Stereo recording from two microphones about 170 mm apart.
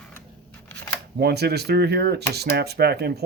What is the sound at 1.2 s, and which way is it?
Speech, 70° right (ahead or behind).